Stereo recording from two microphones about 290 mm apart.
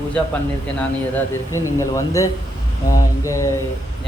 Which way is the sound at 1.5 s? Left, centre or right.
Centre.